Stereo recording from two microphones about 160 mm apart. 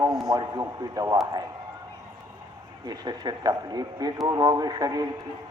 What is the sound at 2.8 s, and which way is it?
A man's voice, 25° right (ahead or behind).